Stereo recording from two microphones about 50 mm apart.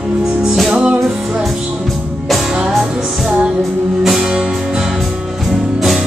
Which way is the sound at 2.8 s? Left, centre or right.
Centre.